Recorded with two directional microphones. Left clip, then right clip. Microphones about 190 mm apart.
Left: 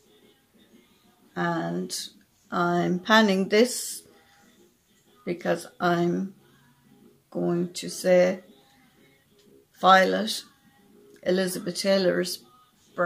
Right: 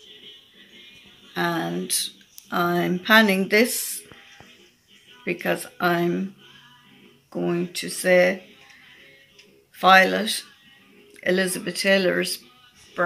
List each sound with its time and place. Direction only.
1.3 s speech: 10° left (ahead or behind)
5.2 s speech: 20° left (ahead or behind)
7.3 s speech: 20° left (ahead or behind)
9.8 s speech: 25° left (ahead or behind)